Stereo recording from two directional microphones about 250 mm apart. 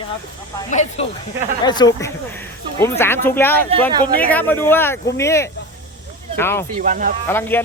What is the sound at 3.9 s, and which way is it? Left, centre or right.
Speech, centre.